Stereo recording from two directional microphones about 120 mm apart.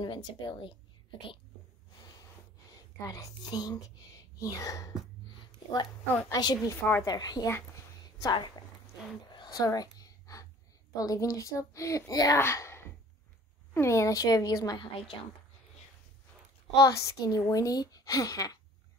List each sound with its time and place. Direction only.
0.0 s speech: 40° left (ahead or behind)
2.7 s a woman's voice: 30° left (ahead or behind)
6.2 s a woman's voice: 30° left (ahead or behind)
6.8 s a child's voice: 20° left (ahead or behind)
7.1 s a woman's voice: 35° left (ahead or behind)
8.0 s a sound: 35° left (ahead or behind)
11.0 s a child's voice: 30° left (ahead or behind)
16.7 s a child's voice: 30° left (ahead or behind)